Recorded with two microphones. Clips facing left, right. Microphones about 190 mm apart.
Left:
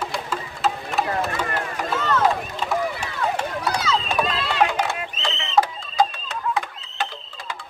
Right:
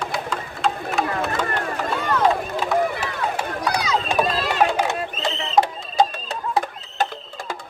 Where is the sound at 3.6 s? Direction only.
15° right (ahead or behind).